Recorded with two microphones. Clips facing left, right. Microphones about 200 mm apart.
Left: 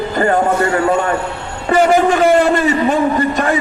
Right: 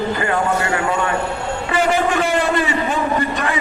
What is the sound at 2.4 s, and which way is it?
Speech, 45° left (ahead or behind).